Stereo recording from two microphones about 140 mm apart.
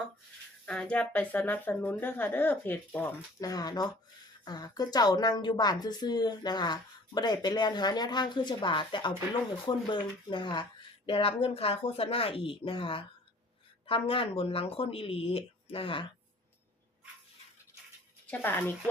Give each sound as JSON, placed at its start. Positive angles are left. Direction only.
{"t": 0.6, "sound": "speech", "side_deg": 5}
{"t": 3.4, "sound": "a woman's voice", "side_deg": 25}
{"t": 18.3, "sound": "speech", "side_deg": 15}